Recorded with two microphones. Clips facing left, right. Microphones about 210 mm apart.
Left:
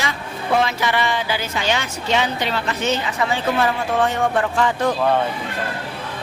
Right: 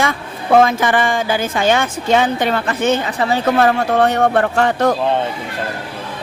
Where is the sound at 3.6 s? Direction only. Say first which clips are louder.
Right 6 dB; 65° right (ahead or behind).